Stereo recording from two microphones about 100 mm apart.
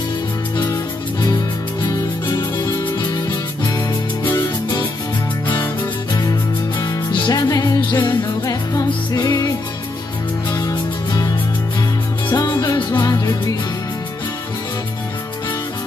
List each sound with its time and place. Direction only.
1.8 s music: 45° left (ahead or behind)
7.1 s music: 40° left (ahead or behind)
10.5 s music: 40° left (ahead or behind)
12.3 s music: 45° left (ahead or behind)